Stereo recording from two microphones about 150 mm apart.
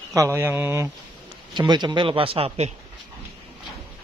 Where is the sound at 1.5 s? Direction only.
30° right (ahead or behind).